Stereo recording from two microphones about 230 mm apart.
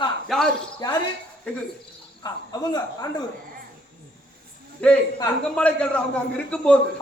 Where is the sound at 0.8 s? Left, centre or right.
Centre.